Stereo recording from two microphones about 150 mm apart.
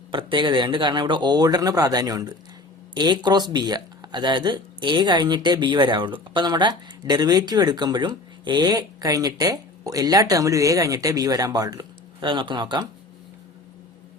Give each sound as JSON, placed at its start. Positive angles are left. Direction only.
{"t": 0.1, "sound": "speech", "side_deg": -35}